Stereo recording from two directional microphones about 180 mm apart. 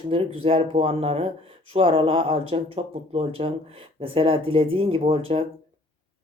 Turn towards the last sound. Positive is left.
turn(degrees=-30)  # may be behind; listen again after turning